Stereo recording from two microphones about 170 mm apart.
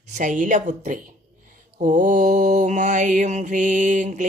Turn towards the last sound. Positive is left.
turn(degrees=-45)  # may be behind; listen again after turning